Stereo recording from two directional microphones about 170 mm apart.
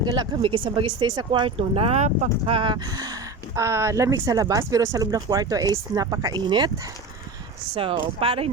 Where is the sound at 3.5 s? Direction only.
15° right (ahead or behind).